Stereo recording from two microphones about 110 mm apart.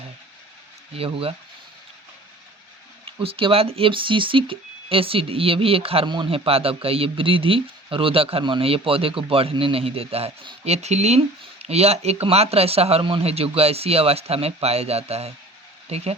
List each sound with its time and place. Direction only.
0.9 s speech: 60° right (ahead or behind)
3.2 s speech: 55° right (ahead or behind); by 11.2 s 90° right
11.6 s speech: 70° right (ahead or behind)